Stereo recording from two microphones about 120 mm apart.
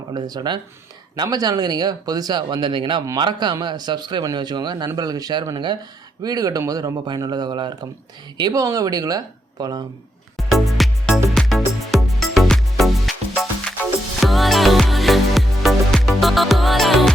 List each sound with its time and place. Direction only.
0.1 s speech: 35° right (ahead or behind)
10.3 s music: centre (ahead or behind)